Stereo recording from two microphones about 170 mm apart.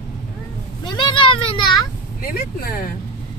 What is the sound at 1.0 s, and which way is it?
Speech, 30° left (ahead or behind).